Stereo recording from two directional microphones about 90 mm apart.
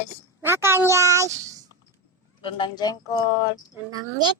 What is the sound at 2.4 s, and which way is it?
Speech, 70° left (ahead or behind).